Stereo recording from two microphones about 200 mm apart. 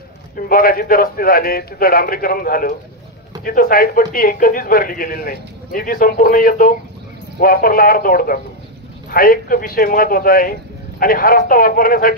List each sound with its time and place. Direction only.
0.5 s a man's voice: 45° left (ahead or behind)